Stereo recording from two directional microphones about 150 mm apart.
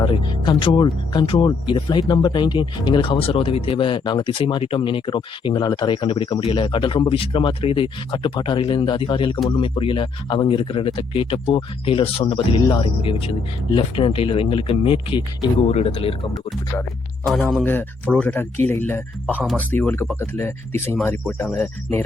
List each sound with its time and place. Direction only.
0.0 s speech: 30° left (ahead or behind)
17.5 s speech: 10° left (ahead or behind)